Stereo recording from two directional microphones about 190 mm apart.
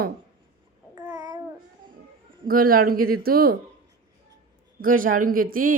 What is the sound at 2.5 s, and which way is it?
Speech, 50° right (ahead or behind).